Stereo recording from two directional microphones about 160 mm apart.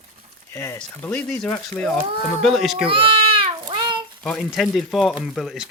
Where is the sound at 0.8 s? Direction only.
10° left (ahead or behind).